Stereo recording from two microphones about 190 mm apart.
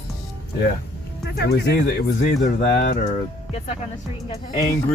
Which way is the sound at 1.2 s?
60° left (ahead or behind).